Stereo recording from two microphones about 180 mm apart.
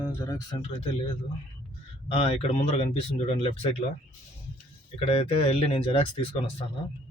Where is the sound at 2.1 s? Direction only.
35° left (ahead or behind).